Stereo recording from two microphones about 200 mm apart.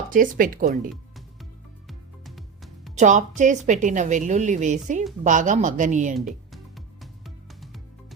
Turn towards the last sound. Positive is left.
turn(degrees=0)  # may be behind; listen again after turning